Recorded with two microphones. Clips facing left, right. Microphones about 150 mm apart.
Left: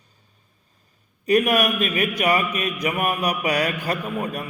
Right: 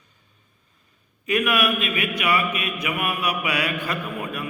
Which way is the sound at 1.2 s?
40° left (ahead or behind).